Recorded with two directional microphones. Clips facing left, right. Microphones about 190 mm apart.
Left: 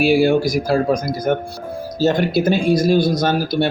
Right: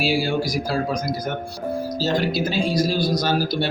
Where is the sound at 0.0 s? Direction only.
55° left (ahead or behind).